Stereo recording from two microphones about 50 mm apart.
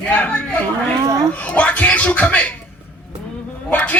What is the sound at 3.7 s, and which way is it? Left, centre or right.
Speech, left.